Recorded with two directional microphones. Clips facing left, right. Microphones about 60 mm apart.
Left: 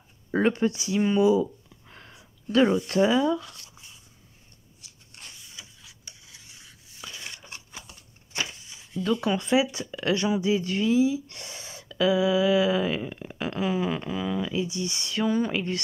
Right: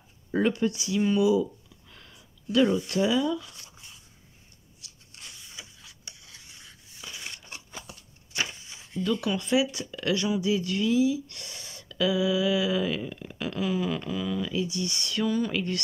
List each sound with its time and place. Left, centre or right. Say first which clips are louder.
0.3 s speech: left 2 dB; left
5.9 s rub: right 1 dB; centre
9.2 s speech: left 3 dB; left